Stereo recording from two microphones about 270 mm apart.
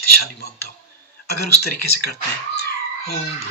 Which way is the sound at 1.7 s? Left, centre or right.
Left.